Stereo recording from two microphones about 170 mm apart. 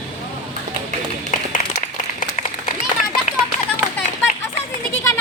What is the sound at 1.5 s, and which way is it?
Applause, 45° left (ahead or behind).